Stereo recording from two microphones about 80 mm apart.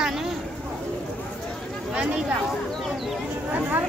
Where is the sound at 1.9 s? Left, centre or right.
Centre.